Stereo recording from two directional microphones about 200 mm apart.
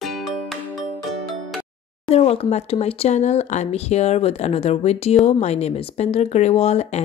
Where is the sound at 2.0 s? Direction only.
30° left (ahead or behind).